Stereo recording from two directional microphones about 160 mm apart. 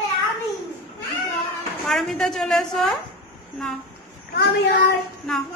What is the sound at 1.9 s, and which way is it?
A woman's voice, centre (ahead or behind).